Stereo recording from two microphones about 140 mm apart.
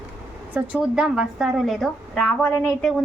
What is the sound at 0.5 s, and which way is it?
A woman's voice, 10° right (ahead or behind).